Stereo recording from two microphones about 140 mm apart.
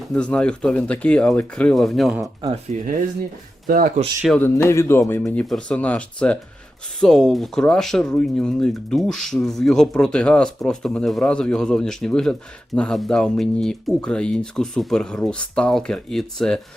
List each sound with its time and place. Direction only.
0.1 s speech: 10° left (ahead or behind)
2.7 s speech: 60° right (ahead or behind)
3.7 s speech: 90° right
4.4 s speech: 20° left (ahead or behind)
5.2 s speech: 5° left (ahead or behind)